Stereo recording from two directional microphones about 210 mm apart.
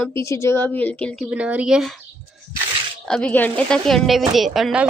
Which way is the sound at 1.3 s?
5° right (ahead or behind).